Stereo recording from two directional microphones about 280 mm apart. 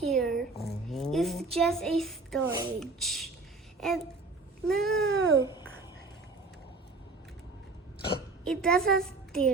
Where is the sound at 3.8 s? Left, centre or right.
Centre.